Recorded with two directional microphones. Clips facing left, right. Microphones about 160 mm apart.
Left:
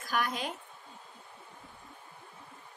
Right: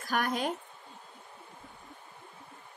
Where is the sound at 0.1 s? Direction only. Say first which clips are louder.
Right 3 dB; 45° right (ahead or behind).